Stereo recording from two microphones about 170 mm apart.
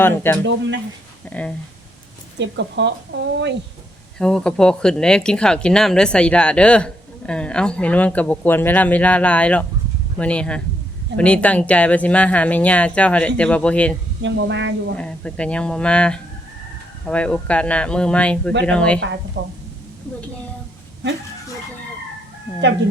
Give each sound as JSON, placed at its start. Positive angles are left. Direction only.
{"t": 0.0, "sound": "speech", "side_deg": 15}
{"t": 2.4, "sound": "speech", "side_deg": -90}
{"t": 4.2, "sound": "speech", "side_deg": 5}
{"t": 14.2, "sound": "speech", "side_deg": -90}
{"t": 14.9, "sound": "speech", "side_deg": 5}
{"t": 19.4, "sound": "a woman's voice", "side_deg": -55}